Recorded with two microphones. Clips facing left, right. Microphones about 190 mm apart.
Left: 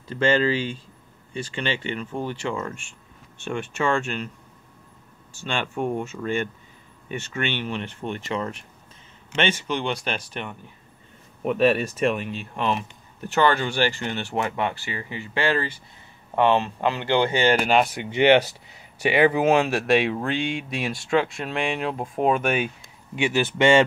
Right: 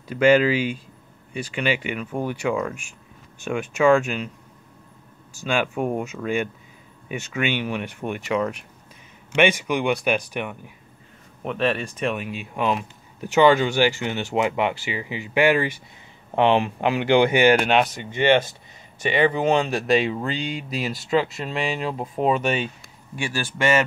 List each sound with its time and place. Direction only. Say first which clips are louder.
0.1 s speech: right 4 dB; 10° right (ahead or behind)
5.5 s speech: right 3 dB; 5° right (ahead or behind)
11.4 s speech: left 4 dB; 5° left (ahead or behind); by 17.6 s 15° right (ahead or behind)
17.6 s speech: even; centre (ahead or behind)
18.1 s speech: left 2 dB; 15° left (ahead or behind)
23.1 s speech: left 6 dB; 20° left (ahead or behind)